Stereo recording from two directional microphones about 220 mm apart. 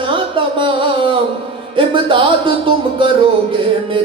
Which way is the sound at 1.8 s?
25° right (ahead or behind).